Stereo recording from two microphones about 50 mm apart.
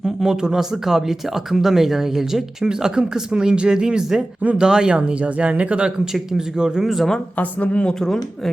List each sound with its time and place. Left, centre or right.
0.0 s speech: centre
6.1 s speech: centre
7.3 s speech: left